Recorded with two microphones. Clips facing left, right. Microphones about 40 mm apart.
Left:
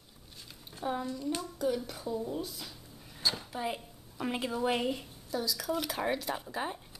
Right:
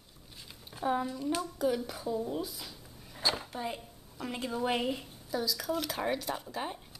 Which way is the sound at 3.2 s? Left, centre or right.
Centre.